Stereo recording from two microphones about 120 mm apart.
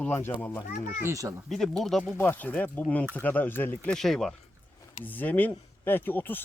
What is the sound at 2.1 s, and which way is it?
Speech, 15° left (ahead or behind).